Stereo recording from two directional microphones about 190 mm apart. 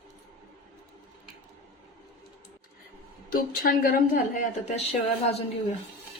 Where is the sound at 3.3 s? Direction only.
50° left (ahead or behind).